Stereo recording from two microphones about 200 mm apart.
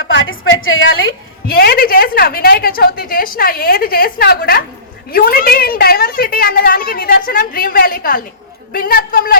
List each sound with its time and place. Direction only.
0.0 s a woman's voice: 75° left (ahead or behind)
1.5 s a woman's voice: 50° left (ahead or behind)